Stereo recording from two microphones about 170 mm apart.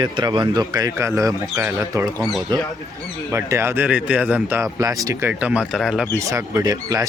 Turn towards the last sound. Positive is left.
turn(degrees=-20)  # may be behind; listen again after turning